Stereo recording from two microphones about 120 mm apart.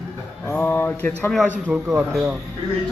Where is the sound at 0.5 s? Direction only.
15° left (ahead or behind).